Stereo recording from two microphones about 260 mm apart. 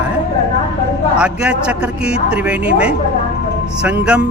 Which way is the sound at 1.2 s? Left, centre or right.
Centre.